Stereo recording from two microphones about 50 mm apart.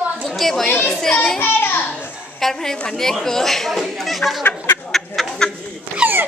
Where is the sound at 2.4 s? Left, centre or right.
Centre.